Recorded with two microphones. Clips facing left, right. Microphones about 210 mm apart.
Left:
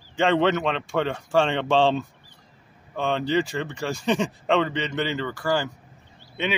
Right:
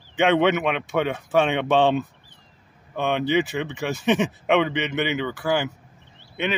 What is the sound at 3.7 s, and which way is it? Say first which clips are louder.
Speech: right 2 dB; 5° right (ahead or behind).